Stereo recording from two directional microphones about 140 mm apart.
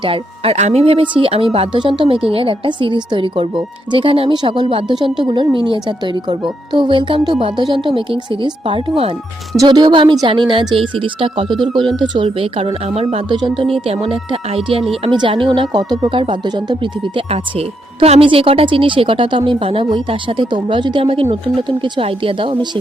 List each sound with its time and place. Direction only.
0.0 s speech: 45° right (ahead or behind)
13.3 s speech: 35° right (ahead or behind)